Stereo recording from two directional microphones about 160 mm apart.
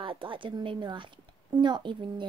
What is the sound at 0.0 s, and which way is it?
A woman's voice, 30° right (ahead or behind).